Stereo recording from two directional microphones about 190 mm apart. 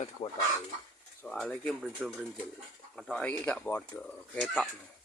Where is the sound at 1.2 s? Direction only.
5° left (ahead or behind).